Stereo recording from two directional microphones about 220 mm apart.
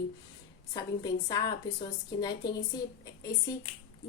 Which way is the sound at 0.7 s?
20° left (ahead or behind).